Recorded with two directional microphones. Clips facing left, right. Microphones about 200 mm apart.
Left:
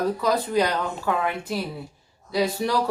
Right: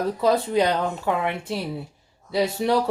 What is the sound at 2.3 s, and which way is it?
Speech, 25° right (ahead or behind).